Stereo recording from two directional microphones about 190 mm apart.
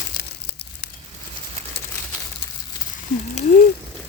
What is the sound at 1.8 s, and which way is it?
Crumpling, 65° left (ahead or behind).